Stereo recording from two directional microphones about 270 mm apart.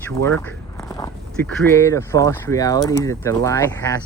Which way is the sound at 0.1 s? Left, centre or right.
Centre.